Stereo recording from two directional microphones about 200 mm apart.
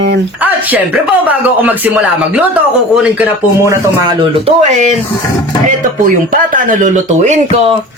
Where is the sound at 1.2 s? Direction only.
10° right (ahead or behind).